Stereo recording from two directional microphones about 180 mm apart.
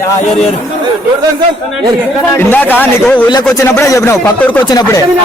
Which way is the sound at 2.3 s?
10° left (ahead or behind).